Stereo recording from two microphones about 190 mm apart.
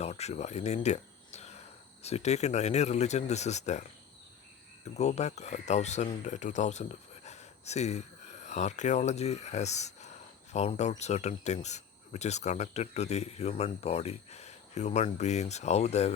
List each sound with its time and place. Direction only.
0.0 s speech: 35° left (ahead or behind)
4.9 s speech: 35° left (ahead or behind)